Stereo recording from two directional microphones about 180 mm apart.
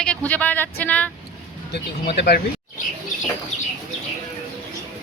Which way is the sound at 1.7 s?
70° left (ahead or behind).